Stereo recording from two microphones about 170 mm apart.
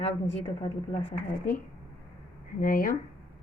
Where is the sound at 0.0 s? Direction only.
40° left (ahead or behind).